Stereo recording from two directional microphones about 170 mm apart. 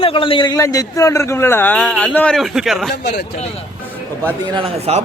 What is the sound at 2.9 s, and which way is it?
Speech, 80° left.